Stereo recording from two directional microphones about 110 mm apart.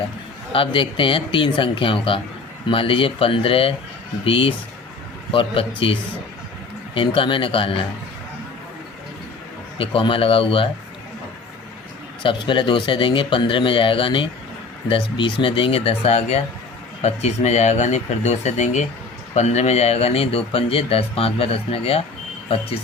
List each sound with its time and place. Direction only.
0.5 s speech: 55° left (ahead or behind)
9.7 s speech: 55° left (ahead or behind)
12.2 s speech: 50° left (ahead or behind)